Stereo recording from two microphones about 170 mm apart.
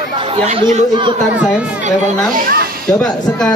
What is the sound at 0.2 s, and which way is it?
Speech, 30° right (ahead or behind).